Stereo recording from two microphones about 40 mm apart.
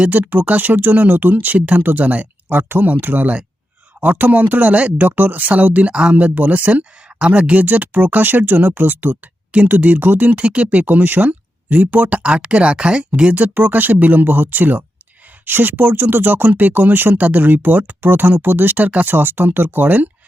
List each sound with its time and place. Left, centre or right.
0.1 s speech: right
2.5 s speech: right
2.8 s speech: right
5.9 s speech: right
6.1 s speech: right
7.6 s speech: right
13.3 s speech: right
17.2 s speech: right